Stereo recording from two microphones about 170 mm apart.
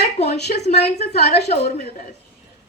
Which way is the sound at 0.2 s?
40° left (ahead or behind).